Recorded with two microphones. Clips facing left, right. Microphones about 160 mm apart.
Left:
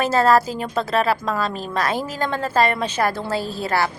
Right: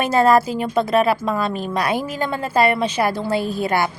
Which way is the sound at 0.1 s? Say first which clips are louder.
Right 4 dB; 15° right (ahead or behind).